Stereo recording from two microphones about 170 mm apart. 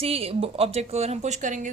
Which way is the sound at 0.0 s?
35° right (ahead or behind).